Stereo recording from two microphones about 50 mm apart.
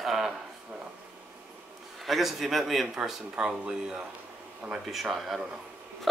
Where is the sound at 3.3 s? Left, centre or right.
Centre.